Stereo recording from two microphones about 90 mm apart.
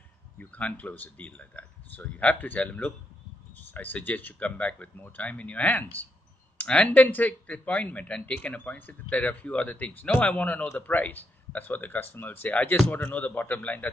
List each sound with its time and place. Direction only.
0.4 s speech: 15° left (ahead or behind)